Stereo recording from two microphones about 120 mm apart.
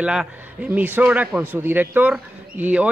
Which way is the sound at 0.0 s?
10° right (ahead or behind).